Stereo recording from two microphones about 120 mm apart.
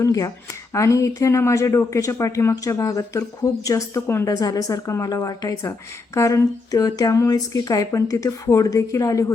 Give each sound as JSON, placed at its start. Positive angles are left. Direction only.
{"t": 0.0, "sound": "speech", "side_deg": 30}